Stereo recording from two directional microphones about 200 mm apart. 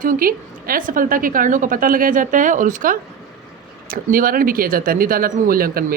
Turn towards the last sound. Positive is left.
turn(degrees=-45)  # may be behind; listen again after turning